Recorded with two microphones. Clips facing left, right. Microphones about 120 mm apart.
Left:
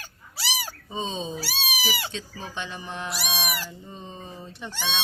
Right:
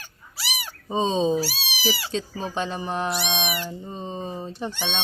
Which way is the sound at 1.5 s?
40° left (ahead or behind).